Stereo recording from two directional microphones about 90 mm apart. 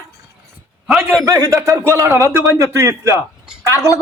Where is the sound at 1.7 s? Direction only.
25° right (ahead or behind).